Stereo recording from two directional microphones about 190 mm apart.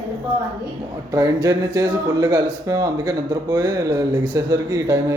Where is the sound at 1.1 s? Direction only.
15° right (ahead or behind).